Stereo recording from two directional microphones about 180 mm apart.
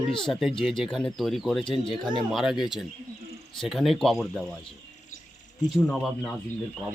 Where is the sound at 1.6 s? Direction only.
30° left (ahead or behind).